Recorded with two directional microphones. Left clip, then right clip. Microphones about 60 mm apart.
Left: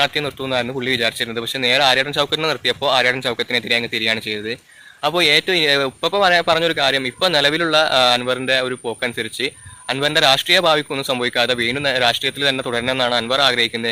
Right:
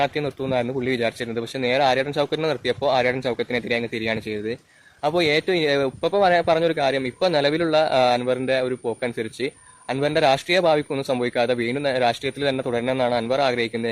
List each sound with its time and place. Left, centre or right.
0.0 s speech: right